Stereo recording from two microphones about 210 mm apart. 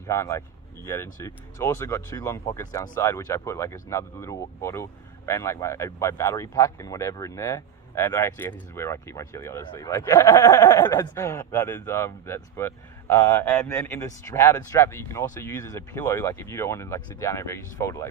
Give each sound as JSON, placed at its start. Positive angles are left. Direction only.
{"t": 0.1, "sound": "speech", "side_deg": 15}